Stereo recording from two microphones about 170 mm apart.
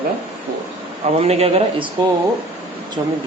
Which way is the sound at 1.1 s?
35° right (ahead or behind).